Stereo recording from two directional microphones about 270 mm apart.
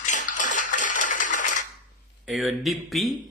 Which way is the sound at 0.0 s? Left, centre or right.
Left.